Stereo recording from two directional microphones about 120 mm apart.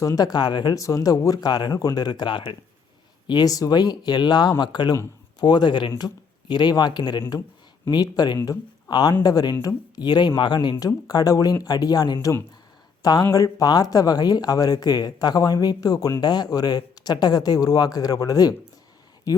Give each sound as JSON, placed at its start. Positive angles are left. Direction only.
{"t": 0.0, "sound": "speech", "side_deg": 30}